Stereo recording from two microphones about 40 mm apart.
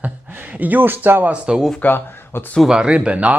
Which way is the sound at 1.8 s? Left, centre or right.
Left.